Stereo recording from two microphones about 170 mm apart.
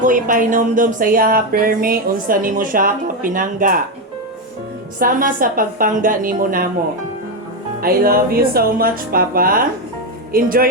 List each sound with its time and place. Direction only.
0.0 s speech: 55° right (ahead or behind)
4.9 s speech: 55° right (ahead or behind)
7.8 s speech: 60° right (ahead or behind)